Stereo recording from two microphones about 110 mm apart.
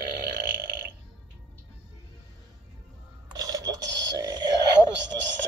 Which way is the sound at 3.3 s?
35° right (ahead or behind).